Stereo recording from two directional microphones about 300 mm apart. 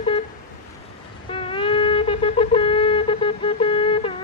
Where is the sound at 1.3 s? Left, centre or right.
Centre.